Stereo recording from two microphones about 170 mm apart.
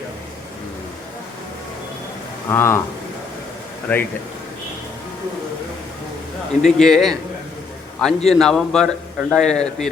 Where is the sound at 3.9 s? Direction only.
10° left (ahead or behind).